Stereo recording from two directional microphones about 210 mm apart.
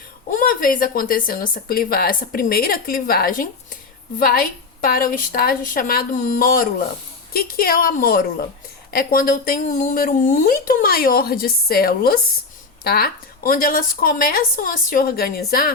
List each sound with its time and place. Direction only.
0.3 s speech: 40° left (ahead or behind)